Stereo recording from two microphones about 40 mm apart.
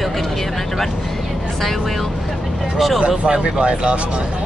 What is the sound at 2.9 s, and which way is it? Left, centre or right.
Speech, centre.